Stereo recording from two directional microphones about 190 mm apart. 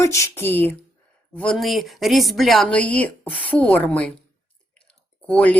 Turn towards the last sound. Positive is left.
turn(degrees=5)  # may be behind; listen again after turning